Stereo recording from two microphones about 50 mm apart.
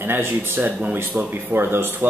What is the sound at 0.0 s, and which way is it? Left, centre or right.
Speech, right.